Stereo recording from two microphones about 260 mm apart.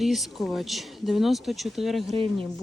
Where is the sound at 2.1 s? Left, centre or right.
Right.